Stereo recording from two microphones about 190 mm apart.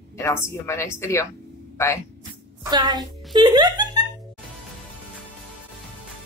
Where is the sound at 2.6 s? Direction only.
20° right (ahead or behind).